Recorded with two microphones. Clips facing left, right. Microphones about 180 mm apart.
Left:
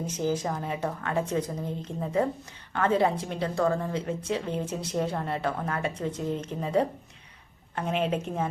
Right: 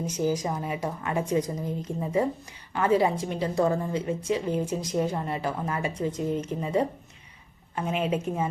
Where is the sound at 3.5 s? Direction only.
20° right (ahead or behind).